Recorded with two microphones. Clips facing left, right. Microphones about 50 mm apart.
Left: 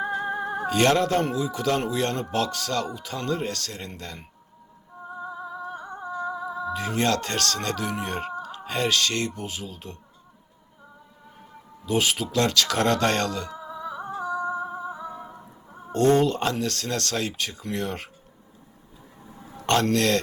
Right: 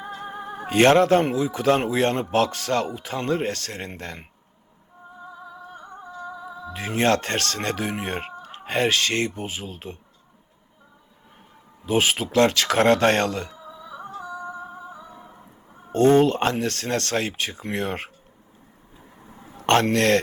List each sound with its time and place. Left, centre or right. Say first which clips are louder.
0.2 s music: left 6 dB; left
0.7 s speech: right 5 dB; right
5.8 s music: left 5 dB; left
6.7 s speech: right 4 dB; right
11.9 s speech: right 3 dB; right
13.5 s music: left 5 dB; left
14.2 s music: left 7 dB; left
16.1 s speech: right 4 dB; right
19.5 s a man's voice: right 3 dB; right